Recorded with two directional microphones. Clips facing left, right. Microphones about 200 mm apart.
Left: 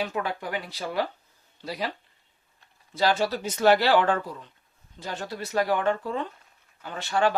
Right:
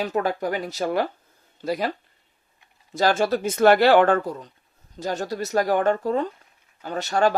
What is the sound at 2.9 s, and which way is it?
Speech, 45° right (ahead or behind).